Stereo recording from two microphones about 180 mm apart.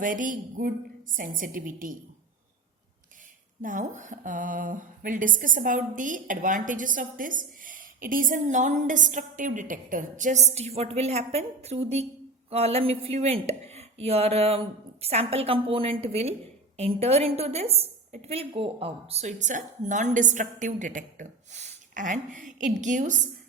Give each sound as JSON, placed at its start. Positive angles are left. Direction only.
{"t": 0.0, "sound": "speech", "side_deg": -50}
{"t": 3.6, "sound": "speech", "side_deg": -45}